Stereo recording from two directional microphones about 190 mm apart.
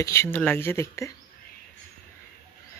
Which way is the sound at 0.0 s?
15° left (ahead or behind).